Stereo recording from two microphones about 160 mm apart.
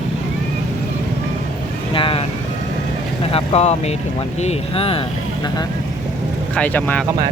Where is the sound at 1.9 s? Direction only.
35° left (ahead or behind).